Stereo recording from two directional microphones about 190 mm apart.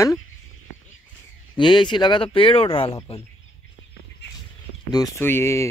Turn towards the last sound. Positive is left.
turn(degrees=15)  # may be behind; listen again after turning